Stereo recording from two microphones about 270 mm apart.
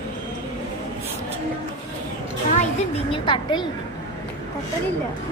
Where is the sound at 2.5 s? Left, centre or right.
Left.